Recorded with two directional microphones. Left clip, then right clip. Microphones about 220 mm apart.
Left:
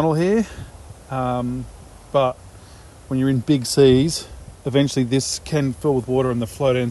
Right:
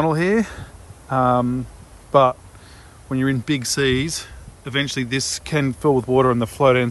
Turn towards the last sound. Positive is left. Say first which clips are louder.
# right 4 dB
turn(degrees=5)  # may be behind; listen again after turning